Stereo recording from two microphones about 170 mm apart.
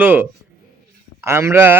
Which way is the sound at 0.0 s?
10° right (ahead or behind).